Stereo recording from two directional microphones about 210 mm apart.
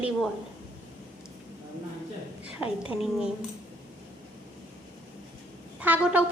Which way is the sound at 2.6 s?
25° left (ahead or behind).